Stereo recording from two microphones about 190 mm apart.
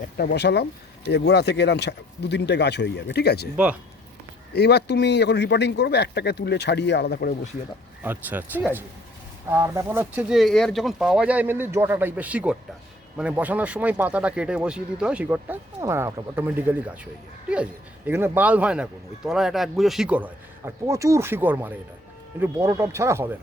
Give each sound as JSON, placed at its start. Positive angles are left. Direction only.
{"t": 0.2, "sound": "speech", "side_deg": 60}
{"t": 3.5, "sound": "speech", "side_deg": -5}
{"t": 4.5, "sound": "speech", "side_deg": 60}
{"t": 8.0, "sound": "speech", "side_deg": -10}